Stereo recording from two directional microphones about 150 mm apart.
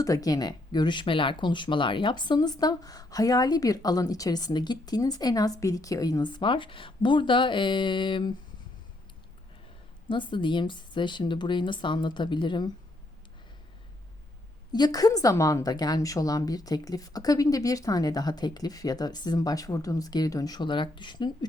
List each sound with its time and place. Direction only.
0.0 s speech: 25° left (ahead or behind)
10.1 s speech: 35° left (ahead or behind)
14.7 s speech: 25° left (ahead or behind)